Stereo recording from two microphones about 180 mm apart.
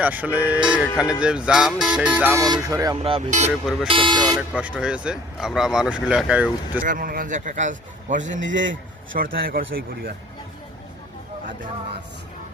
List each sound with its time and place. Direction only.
0.0 s speech: 10° right (ahead or behind)
2.4 s speech: 20° right (ahead or behind)
3.0 s speech: 35° right (ahead or behind)
3.8 s speech: 30° right (ahead or behind)
4.4 s speech: 5° right (ahead or behind)
6.8 s a man's voice: 50° right (ahead or behind)
8.5 s a man's voice: 90° right
9.1 s a man's voice: 55° right (ahead or behind)